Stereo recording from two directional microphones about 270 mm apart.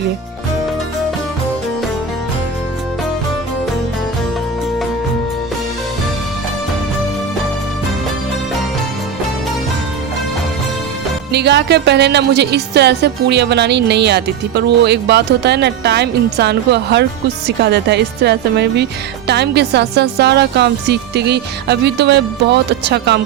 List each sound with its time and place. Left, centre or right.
11.3 s speech: right